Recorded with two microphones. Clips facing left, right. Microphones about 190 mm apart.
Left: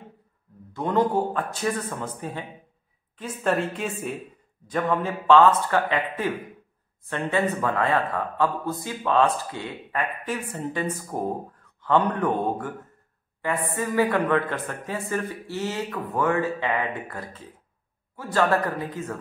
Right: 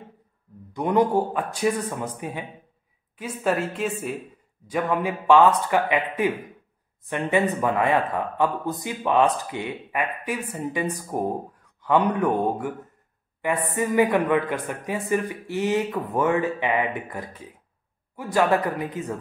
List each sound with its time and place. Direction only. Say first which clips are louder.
0.7 s speech: right 2 dB; 15° right (ahead or behind)
3.2 s a woman's voice: even; 5° right (ahead or behind)